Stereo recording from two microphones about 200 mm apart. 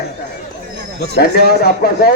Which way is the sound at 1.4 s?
50° left (ahead or behind).